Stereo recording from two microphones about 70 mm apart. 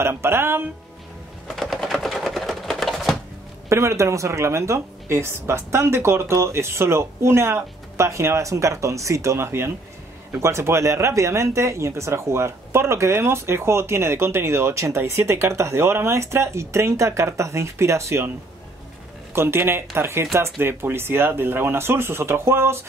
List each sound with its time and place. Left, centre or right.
0.0 s speech: right
1.5 s typewriter: centre
3.6 s speech: right
19.3 s speech: right